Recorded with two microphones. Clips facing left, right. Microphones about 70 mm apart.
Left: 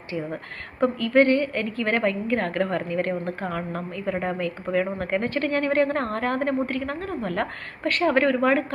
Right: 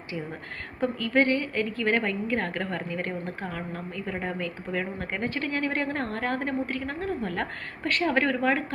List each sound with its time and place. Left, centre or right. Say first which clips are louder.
0.8 s a woman's voice: left 5 dB; left
7.9 s a woman's voice: left 4 dB; left